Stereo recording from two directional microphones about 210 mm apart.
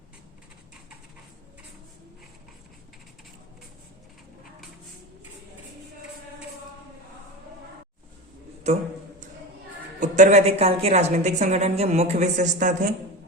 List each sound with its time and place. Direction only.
8.7 s a woman's voice: 30° right (ahead or behind)
10.0 s a woman's voice: 35° right (ahead or behind)